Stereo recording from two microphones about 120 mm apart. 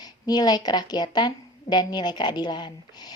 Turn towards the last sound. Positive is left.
turn(degrees=40)  # may be behind; listen again after turning